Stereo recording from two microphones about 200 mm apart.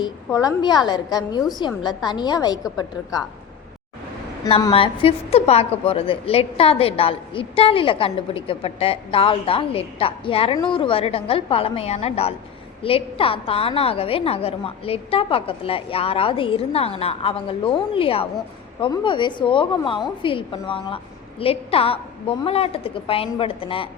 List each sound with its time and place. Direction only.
0.0 s a woman's voice: 20° left (ahead or behind)
4.7 s a woman's voice: 30° left (ahead or behind)